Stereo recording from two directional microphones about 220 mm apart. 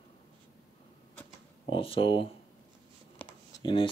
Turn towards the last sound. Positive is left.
turn(degrees=20)  # may be behind; listen again after turning